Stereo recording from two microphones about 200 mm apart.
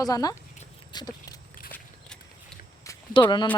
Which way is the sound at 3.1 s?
25° left (ahead or behind).